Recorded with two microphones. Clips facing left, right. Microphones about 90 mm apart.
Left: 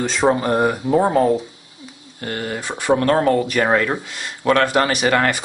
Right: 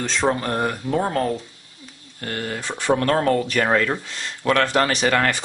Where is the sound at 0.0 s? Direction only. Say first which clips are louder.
Left 4 dB; 10° left (ahead or behind).